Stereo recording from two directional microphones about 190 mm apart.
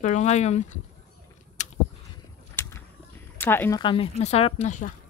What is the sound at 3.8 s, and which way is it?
Speech, 30° left (ahead or behind).